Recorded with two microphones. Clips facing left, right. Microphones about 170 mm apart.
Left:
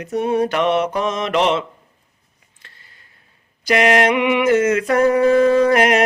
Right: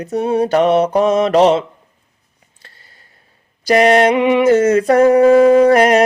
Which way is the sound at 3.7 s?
35° right (ahead or behind).